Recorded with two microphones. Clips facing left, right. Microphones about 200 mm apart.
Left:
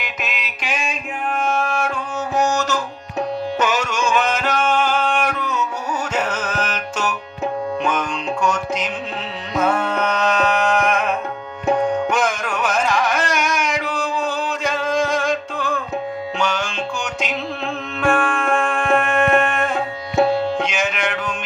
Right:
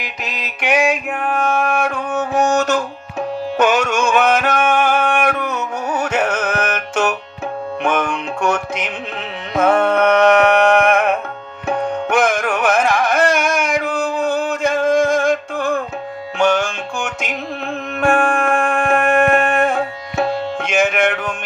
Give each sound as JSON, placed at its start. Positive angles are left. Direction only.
{"t": 0.6, "sound": "a sound", "side_deg": -65}
{"t": 2.1, "sound": "music", "side_deg": -55}
{"t": 12.1, "sound": "carnatic music", "side_deg": -55}
{"t": 16.4, "sound": "music", "side_deg": -50}